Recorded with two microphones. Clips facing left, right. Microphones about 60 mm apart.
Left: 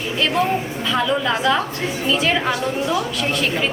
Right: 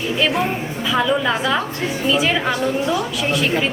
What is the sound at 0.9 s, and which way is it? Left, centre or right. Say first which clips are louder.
A woman's voice: right 2 dB; centre.